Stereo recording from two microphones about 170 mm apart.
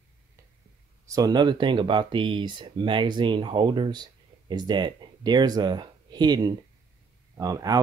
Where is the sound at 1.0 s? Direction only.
20° right (ahead or behind).